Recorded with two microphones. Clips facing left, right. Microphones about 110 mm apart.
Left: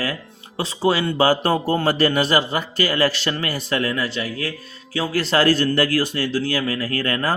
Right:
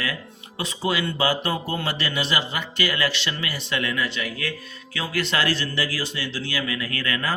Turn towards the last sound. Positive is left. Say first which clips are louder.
# left 5 dB
turn(degrees=40)  # may be behind; listen again after turning